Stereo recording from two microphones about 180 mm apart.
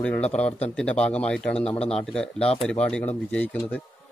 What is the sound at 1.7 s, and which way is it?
Speech, 35° left (ahead or behind).